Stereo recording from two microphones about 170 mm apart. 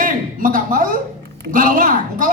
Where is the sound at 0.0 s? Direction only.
55° right (ahead or behind).